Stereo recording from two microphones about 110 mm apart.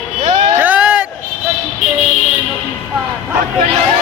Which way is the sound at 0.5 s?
15° right (ahead or behind).